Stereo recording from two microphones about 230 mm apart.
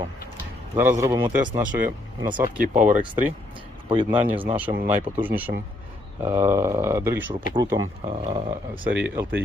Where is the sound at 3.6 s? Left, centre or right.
Right.